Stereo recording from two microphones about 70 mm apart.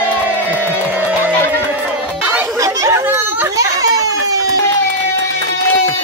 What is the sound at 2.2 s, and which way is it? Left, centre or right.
Chatter, right.